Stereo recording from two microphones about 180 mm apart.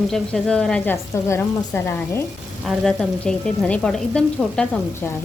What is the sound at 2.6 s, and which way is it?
Speech, centre (ahead or behind).